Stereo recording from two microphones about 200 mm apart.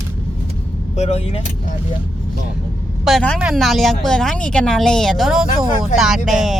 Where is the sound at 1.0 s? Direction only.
30° left (ahead or behind).